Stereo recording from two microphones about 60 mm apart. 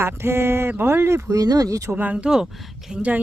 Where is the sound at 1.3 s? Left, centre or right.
Right.